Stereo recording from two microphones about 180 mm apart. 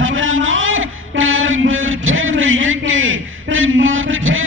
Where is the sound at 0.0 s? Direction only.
90° right.